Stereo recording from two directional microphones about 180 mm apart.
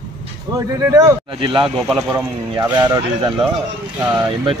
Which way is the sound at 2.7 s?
20° right (ahead or behind).